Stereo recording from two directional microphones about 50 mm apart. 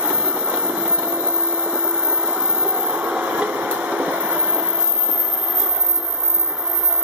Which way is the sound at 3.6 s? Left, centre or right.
Right.